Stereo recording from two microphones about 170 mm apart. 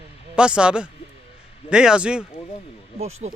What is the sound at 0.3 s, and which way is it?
Speech, 5° right (ahead or behind).